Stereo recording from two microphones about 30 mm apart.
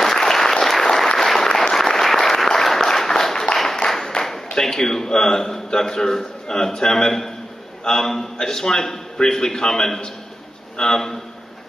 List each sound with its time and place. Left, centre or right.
0.0 s applause: centre
3.5 s a sound: centre
4.1 s a man's voice: centre